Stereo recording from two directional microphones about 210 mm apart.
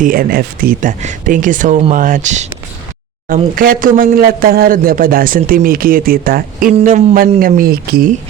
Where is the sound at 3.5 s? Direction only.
40° right (ahead or behind).